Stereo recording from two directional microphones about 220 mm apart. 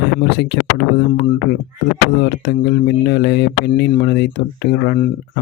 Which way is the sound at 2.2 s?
50° left (ahead or behind).